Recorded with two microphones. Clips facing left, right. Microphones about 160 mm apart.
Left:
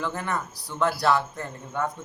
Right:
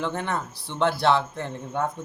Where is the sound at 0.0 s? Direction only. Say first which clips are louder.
Right 1 dB; 25° right (ahead or behind).